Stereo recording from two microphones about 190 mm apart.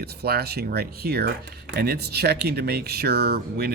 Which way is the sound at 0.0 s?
55° right (ahead or behind).